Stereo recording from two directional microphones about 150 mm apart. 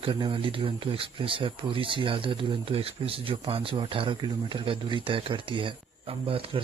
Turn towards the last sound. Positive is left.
turn(degrees=-40)  # may be behind; listen again after turning